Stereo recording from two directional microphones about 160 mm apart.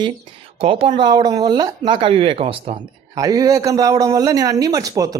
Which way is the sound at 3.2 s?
20° right (ahead or behind).